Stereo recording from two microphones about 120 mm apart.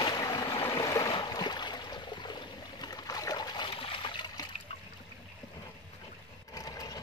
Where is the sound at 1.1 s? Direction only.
40° left (ahead or behind).